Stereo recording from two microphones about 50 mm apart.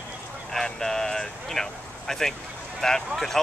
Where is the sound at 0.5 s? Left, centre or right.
Centre.